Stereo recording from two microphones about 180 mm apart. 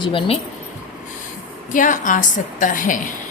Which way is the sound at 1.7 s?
45° left (ahead or behind).